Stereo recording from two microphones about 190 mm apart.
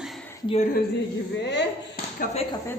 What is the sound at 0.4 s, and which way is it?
Speech, 35° left (ahead or behind).